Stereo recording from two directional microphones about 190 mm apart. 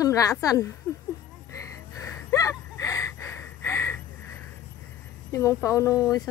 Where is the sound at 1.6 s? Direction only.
15° left (ahead or behind).